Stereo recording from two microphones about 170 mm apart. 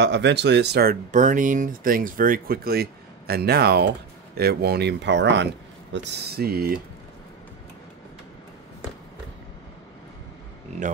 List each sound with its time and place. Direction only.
0.0 s speech: 90° right; by 0.9 s 75° right (ahead or behind)
1.1 s speech: 50° right (ahead or behind); by 5.5 s 90° right
5.9 s speech: 65° right (ahead or behind)